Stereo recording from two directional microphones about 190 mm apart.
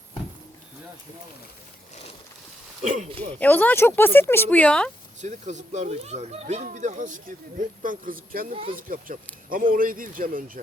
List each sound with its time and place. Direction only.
2.8 s speech: 40° right (ahead or behind)
3.3 s speech: 10° left (ahead or behind)
5.2 s speech: 40° right (ahead or behind)